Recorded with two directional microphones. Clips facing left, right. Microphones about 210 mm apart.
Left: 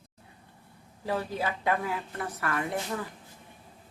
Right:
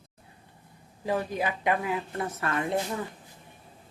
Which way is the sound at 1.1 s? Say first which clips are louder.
Right 2 dB; 15° right (ahead or behind).